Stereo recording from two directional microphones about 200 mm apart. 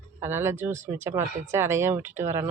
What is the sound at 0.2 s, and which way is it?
Speech, 10° right (ahead or behind).